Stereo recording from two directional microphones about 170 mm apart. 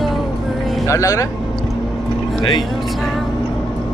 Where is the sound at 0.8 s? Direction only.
20° left (ahead or behind).